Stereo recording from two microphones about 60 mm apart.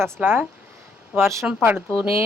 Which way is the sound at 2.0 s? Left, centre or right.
Right.